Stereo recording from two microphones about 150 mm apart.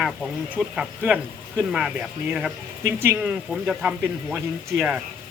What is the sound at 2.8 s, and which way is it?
Speech, 15° right (ahead or behind).